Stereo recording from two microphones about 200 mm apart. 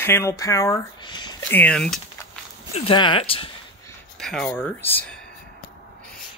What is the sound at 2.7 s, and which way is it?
Speech, 25° left (ahead or behind).